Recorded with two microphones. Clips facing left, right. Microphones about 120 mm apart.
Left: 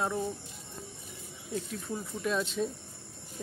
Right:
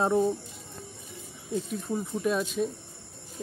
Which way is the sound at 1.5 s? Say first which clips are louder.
Right 5 dB; 20° right (ahead or behind).